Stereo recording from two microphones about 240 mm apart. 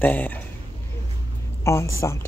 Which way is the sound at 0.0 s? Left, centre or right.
Centre.